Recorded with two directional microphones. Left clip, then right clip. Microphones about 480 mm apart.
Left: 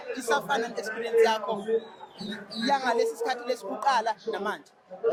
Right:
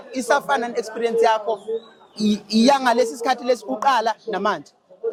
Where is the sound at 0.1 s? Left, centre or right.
Right.